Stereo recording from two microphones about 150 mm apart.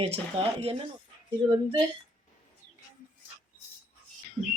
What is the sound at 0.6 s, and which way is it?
Speech, 40° right (ahead or behind).